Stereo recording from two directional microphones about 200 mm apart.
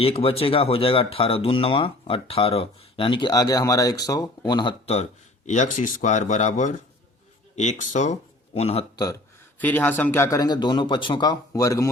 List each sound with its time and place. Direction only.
0.0 s speech: 30° left (ahead or behind)
5.5 s speech: 35° left (ahead or behind)
9.6 s speech: 10° left (ahead or behind)